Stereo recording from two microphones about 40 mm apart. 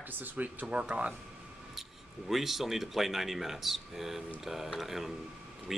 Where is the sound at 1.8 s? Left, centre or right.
Centre.